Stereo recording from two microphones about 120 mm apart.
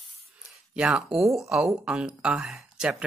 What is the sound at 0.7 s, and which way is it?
Speech, 5° right (ahead or behind).